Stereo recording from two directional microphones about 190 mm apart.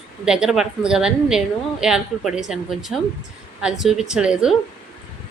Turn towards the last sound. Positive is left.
turn(degrees=-5)  # may be behind; listen again after turning